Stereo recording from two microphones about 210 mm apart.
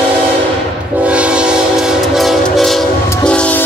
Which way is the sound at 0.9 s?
5° right (ahead or behind).